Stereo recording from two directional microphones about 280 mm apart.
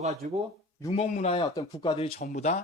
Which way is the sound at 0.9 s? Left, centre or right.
Left.